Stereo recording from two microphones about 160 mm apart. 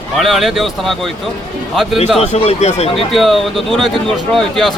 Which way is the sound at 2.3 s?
40° left (ahead or behind).